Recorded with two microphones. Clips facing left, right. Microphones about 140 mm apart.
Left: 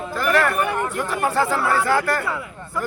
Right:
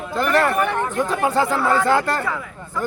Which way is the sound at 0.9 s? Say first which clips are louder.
Right 2 dB; 20° right (ahead or behind).